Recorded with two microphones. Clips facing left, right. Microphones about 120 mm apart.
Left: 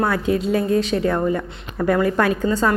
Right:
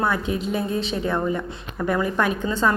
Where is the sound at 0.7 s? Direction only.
60° left (ahead or behind).